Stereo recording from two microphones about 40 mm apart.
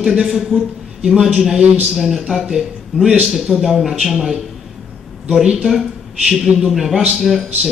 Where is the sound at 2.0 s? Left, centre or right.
Centre.